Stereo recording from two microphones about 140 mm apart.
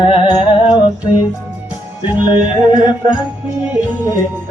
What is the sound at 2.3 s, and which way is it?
Music, 35° left (ahead or behind).